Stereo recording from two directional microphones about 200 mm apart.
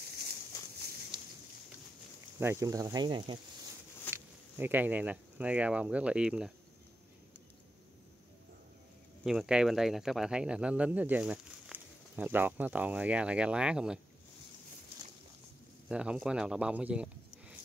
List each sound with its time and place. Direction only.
0.0 s a sound: 50° right (ahead or behind)
1.1 s a sound: 25° right (ahead or behind)
2.4 s speech: 15° right (ahead or behind)
4.1 s speech: 10° right (ahead or behind)
9.2 s speech: centre (ahead or behind)
15.9 s speech: 5° right (ahead or behind)